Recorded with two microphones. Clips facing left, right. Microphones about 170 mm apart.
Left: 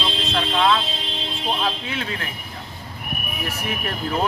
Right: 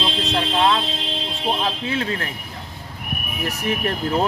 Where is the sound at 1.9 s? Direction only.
35° right (ahead or behind).